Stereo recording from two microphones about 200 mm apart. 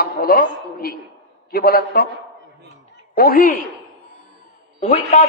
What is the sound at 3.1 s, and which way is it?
Speech, 45° left (ahead or behind).